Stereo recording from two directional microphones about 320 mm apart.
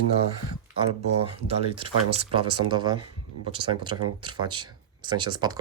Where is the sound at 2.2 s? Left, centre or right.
Centre.